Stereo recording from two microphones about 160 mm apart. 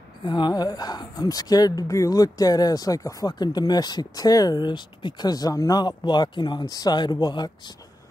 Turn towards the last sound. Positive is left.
turn(degrees=25)  # may be behind; listen again after turning